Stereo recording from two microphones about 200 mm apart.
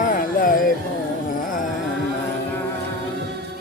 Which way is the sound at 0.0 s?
45° left (ahead or behind).